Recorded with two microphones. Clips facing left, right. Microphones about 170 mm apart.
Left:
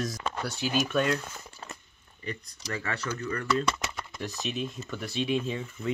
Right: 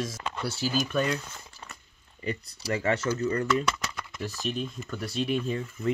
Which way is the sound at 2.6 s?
25° right (ahead or behind).